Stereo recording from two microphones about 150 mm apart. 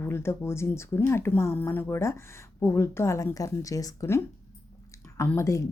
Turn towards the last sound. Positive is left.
turn(degrees=20)  # may be behind; listen again after turning